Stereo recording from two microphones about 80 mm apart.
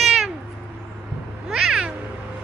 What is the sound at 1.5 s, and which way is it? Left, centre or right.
Meow, centre.